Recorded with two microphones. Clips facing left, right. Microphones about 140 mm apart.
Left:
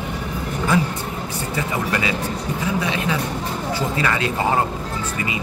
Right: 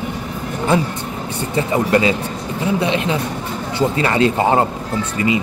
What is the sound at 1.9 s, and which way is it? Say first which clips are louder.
Speech: right 7 dB; 30° right (ahead or behind).